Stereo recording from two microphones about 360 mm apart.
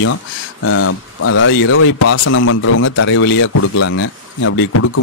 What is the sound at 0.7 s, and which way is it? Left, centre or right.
A man's voice, left.